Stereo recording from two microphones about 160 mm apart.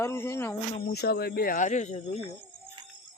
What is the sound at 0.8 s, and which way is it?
Speech, 85° left.